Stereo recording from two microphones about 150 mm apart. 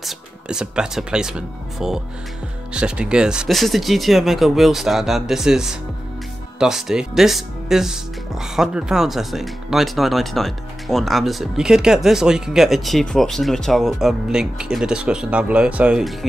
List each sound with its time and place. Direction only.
0.0 s speech: 5° right (ahead or behind)